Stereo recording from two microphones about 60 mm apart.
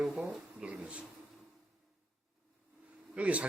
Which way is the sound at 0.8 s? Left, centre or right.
Centre.